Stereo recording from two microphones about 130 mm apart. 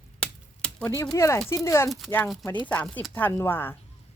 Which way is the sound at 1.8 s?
Centre (ahead or behind).